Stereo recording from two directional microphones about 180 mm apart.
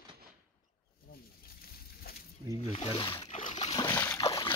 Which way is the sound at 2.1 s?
60° left (ahead or behind).